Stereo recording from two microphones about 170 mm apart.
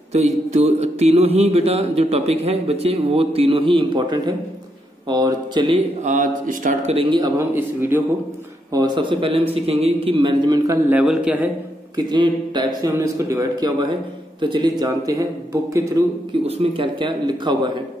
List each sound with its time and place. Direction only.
0.1 s mantra: 40° right (ahead or behind)
5.0 s speech: 25° right (ahead or behind)
6.0 s speech: 50° right (ahead or behind)
7.0 s speech: 25° right (ahead or behind)
7.5 s a man's voice: 15° right (ahead or behind)
8.7 s speech: 25° right (ahead or behind)
9.5 s mantra: 35° right (ahead or behind)
10.9 s a man's voice: 10° right (ahead or behind)
12.1 s a man's voice: 25° right (ahead or behind)
16.4 s speech: 35° right (ahead or behind)